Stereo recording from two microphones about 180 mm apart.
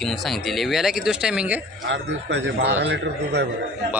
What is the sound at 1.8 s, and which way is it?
A man's voice, 80° right.